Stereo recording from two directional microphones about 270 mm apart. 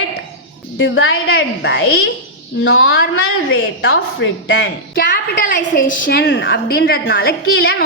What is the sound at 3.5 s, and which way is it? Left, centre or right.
A woman's voice, left.